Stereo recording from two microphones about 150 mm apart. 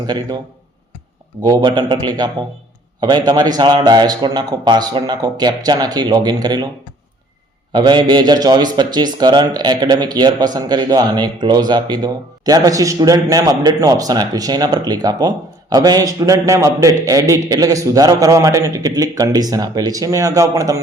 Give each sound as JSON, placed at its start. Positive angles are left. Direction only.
{"t": 1.4, "sound": "a man's voice", "side_deg": -25}
{"t": 7.7, "sound": "a man's voice", "side_deg": -30}